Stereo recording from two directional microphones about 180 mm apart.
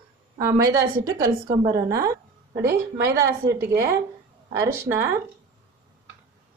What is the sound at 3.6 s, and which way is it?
A woman's voice, 15° right (ahead or behind).